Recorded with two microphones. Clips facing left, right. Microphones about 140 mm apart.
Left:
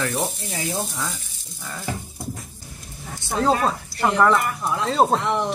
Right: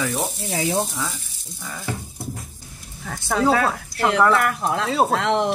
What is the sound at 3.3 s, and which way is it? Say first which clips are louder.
Speech: right 1 dB; 90° right.